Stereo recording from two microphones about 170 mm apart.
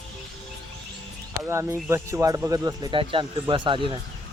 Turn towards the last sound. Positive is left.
turn(degrees=-30)  # may be behind; listen again after turning